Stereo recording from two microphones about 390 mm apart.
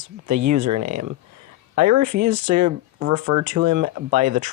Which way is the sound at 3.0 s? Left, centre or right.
Centre.